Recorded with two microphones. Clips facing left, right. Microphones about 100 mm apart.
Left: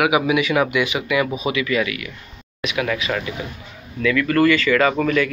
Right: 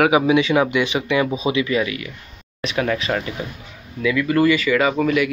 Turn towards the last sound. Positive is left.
turn(degrees=-10)  # may be behind; listen again after turning